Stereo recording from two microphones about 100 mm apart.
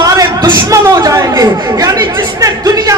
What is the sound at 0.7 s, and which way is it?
Chatter, 35° right (ahead or behind).